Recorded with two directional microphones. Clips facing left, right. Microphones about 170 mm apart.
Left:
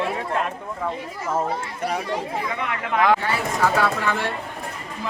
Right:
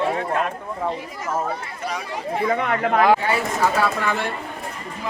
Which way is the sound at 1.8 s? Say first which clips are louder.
Left 5 dB; 55° left (ahead or behind).